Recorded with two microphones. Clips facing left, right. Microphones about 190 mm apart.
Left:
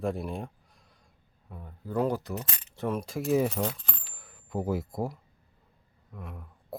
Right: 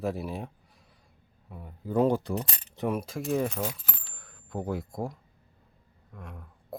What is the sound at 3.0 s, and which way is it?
Speech, centre (ahead or behind).